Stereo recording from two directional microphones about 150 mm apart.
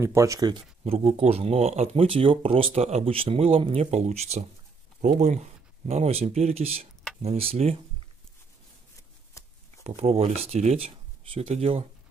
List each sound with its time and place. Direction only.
0.0 s speech: 20° right (ahead or behind)
0.9 s speech: 45° right (ahead or behind)
9.4 s shuffling cards: 20° left (ahead or behind)
9.8 s speech: 45° right (ahead or behind)